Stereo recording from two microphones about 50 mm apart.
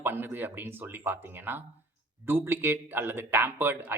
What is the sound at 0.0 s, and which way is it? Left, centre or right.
A man's voice, right.